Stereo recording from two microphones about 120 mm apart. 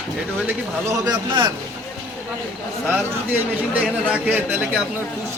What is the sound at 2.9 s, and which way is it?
A man's voice, 15° right (ahead or behind).